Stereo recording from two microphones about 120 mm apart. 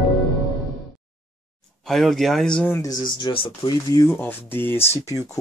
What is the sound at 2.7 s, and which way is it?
Speech, 30° left (ahead or behind).